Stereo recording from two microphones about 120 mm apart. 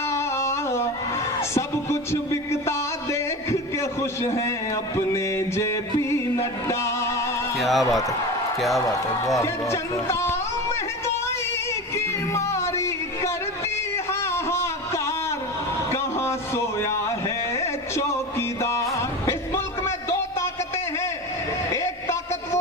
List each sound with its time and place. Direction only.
0.1 s music: 25° left (ahead or behind)
1.4 s a man's voice: 25° left (ahead or behind)
7.5 s a man's voice: centre (ahead or behind)
9.4 s speech: 25° left (ahead or behind)
11.9 s music: 25° left (ahead or behind)
13.9 s a sound: 20° left (ahead or behind)
18.9 s music: 25° left (ahead or behind)
21.7 s a sound: 25° left (ahead or behind)